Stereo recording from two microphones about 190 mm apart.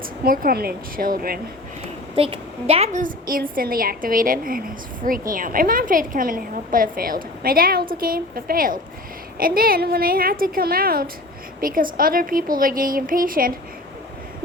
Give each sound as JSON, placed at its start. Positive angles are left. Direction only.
{"t": 0.0, "sound": "a woman's voice", "side_deg": -50}
{"t": 2.1, "sound": "a woman's voice", "side_deg": -30}